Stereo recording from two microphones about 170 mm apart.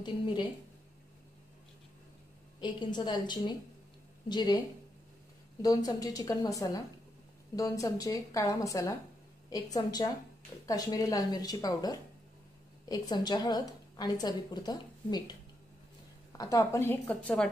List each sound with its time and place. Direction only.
2.6 s a woman's voice: 25° left (ahead or behind)
16.3 s a woman's voice: 20° left (ahead or behind)